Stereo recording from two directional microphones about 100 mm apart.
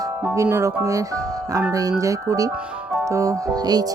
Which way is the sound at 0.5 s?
30° right (ahead or behind).